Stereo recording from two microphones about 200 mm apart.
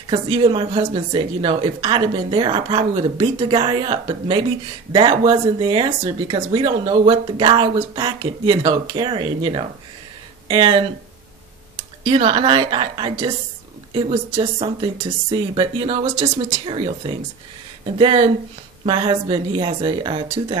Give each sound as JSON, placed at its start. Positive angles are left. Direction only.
{"t": 0.1, "sound": "speech", "side_deg": -25}
{"t": 12.0, "sound": "speech", "side_deg": -25}